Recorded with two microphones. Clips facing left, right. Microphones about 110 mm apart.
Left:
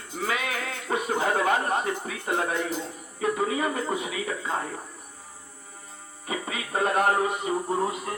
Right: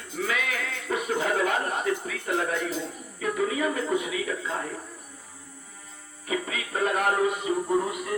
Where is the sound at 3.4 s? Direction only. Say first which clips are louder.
Right 4 dB; 35° left (ahead or behind).